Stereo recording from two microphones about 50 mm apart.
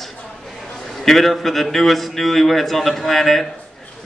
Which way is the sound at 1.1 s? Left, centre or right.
Centre.